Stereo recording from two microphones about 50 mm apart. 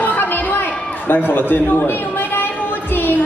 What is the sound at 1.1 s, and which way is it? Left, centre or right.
Speech, left.